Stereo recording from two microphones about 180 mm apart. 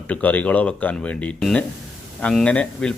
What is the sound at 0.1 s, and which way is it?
A man's voice, 10° left (ahead or behind).